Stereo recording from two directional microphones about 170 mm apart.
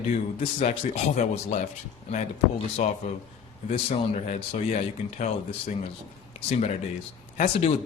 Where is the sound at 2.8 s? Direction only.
40° left (ahead or behind).